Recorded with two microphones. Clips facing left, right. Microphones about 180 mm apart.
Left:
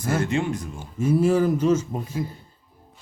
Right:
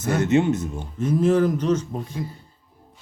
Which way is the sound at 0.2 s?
20° right (ahead or behind).